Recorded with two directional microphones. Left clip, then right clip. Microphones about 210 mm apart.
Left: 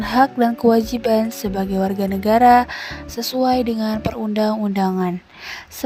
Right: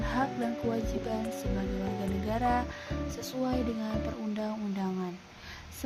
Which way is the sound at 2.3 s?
55° left (ahead or behind).